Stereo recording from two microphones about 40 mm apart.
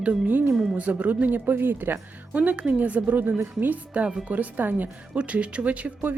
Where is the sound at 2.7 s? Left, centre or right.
Right.